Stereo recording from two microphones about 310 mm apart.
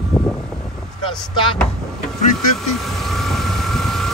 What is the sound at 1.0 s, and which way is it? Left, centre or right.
Speech, centre.